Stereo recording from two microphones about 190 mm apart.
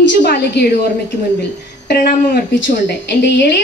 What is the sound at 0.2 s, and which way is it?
A woman's voice, 60° left (ahead or behind).